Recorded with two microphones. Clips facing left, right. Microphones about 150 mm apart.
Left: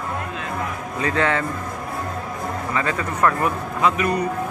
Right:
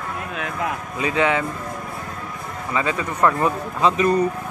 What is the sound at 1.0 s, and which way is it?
Speech, 15° right (ahead or behind).